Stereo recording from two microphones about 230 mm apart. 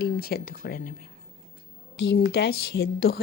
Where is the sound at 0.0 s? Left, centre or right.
Left.